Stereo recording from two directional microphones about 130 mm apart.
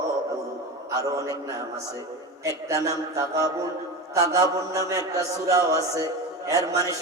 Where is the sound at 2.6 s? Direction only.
25° right (ahead or behind).